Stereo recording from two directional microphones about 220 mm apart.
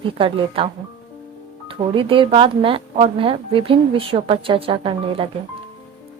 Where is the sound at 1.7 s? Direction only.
25° right (ahead or behind).